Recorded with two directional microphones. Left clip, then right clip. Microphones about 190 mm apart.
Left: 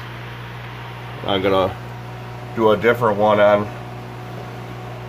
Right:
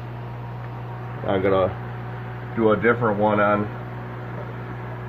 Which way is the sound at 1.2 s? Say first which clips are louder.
Left 2 dB; 20° left (ahead or behind).